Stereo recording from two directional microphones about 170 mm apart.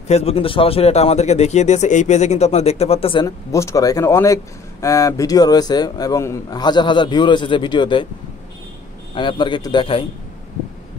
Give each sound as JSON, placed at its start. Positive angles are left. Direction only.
{"t": 0.1, "sound": "speech", "side_deg": 35}
{"t": 3.3, "sound": "a man's voice", "side_deg": 20}
{"t": 9.1, "sound": "a man's voice", "side_deg": 30}